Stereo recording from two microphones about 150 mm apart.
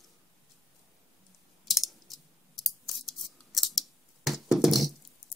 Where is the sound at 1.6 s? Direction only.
Centre (ahead or behind).